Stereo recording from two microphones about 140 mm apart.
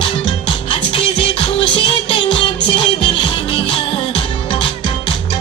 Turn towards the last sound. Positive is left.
turn(degrees=35)  # may be behind; listen again after turning